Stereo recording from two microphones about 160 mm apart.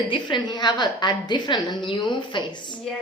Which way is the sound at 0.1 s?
30° left (ahead or behind).